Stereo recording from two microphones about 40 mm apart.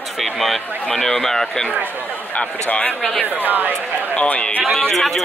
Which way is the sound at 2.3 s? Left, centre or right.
Left.